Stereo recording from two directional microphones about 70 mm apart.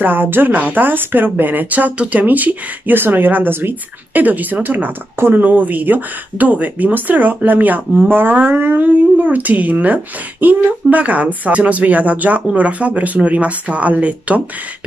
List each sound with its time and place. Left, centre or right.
0.0 s speech: right